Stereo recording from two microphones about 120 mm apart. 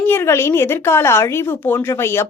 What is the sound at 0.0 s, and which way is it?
A woman's voice, 20° left (ahead or behind).